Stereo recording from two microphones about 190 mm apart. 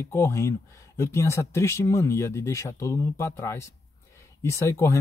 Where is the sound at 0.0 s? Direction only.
15° left (ahead or behind).